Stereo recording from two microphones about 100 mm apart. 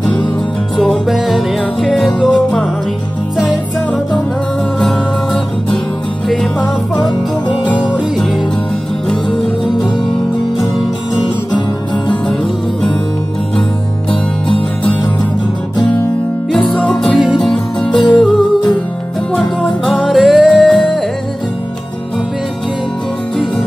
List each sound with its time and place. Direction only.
0.7 s music: centre (ahead or behind)
4.7 s music: 5° left (ahead or behind)
7.1 s music: 50° left (ahead or behind)
9.1 s music: 5° left (ahead or behind)
16.5 s music: 10° left (ahead or behind)
17.8 s music: 50° left (ahead or behind)
19.3 s music: 5° left (ahead or behind)